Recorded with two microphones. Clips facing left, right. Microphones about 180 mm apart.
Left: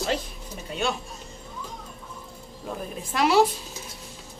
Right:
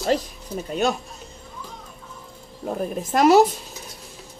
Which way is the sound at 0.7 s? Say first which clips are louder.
Right 5 dB; 40° right (ahead or behind).